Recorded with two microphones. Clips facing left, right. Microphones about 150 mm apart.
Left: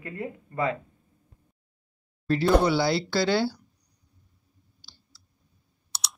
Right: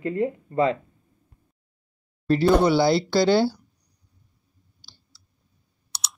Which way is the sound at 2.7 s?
20° right (ahead or behind).